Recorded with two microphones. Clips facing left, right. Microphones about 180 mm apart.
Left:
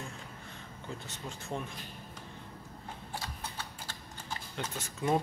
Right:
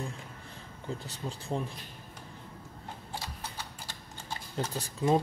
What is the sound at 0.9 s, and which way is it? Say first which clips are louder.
Speech: right 4 dB; 35° right (ahead or behind).